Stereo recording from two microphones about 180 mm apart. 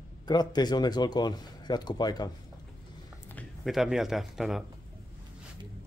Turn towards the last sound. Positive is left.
turn(degrees=0)  # may be behind; listen again after turning